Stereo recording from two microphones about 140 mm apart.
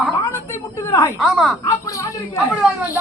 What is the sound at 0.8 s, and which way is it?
Speech, 20° left (ahead or behind).